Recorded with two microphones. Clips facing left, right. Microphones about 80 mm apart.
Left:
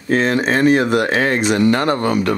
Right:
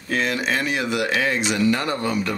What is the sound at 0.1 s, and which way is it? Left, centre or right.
Speech, left.